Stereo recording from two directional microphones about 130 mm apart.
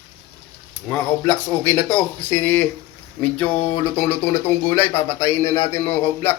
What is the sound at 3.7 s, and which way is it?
Speech, 15° left (ahead or behind).